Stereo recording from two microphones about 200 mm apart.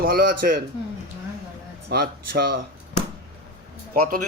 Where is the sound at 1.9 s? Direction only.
55° right (ahead or behind).